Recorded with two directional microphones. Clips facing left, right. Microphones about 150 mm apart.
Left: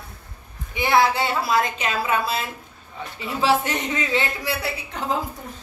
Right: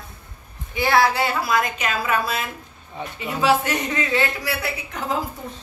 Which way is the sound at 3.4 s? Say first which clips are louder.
Right 1 dB; 25° left (ahead or behind).